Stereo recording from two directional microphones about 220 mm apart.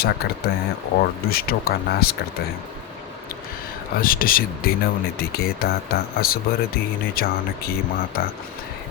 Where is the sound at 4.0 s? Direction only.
40° left (ahead or behind).